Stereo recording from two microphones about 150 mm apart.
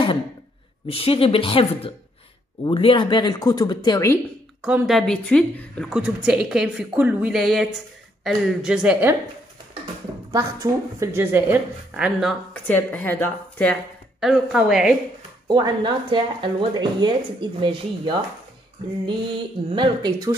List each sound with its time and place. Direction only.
0.8 s a woman's voice: 40° left (ahead or behind); by 4.2 s 20° left (ahead or behind)
4.6 s a woman's voice: 5° right (ahead or behind)
5.9 s a woman's voice: 5° right (ahead or behind)
10.3 s a woman's voice: 20° right (ahead or behind); by 12.4 s 5° right (ahead or behind)
12.6 s a woman's voice: 10° left (ahead or behind)
14.2 s a woman's voice: 5° right (ahead or behind)
15.4 s speech: 30° right (ahead or behind)